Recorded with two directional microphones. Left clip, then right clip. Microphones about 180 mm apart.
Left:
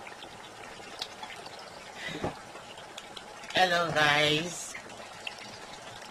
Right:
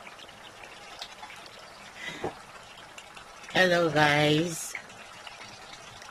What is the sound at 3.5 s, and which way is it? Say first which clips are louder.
Speech: right 2 dB; 55° right (ahead or behind).